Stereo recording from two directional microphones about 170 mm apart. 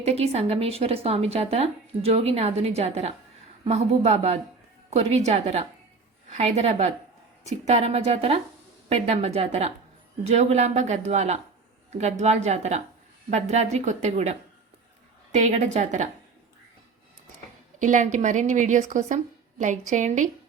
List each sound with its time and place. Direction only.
0.0 s a woman's voice: 40° right (ahead or behind)
17.7 s a woman's voice: 45° right (ahead or behind)